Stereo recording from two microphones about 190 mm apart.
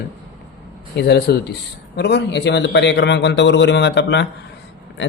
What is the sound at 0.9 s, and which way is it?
A man's voice, 60° left (ahead or behind).